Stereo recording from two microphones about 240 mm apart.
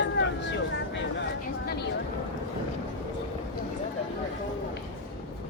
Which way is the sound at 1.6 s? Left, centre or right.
Left.